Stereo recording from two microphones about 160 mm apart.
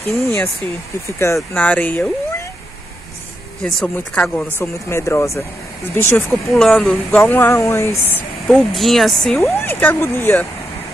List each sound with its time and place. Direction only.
0.1 s speech: 15° left (ahead or behind)
3.6 s speech: 5° left (ahead or behind)
6.5 s speech: centre (ahead or behind); by 7.9 s 15° left (ahead or behind)
8.5 s speech: centre (ahead or behind)
9.4 s speech: 15° left (ahead or behind)